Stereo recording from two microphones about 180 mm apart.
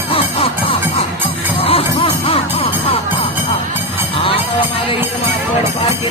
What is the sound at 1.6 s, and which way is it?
Music, 30° left (ahead or behind).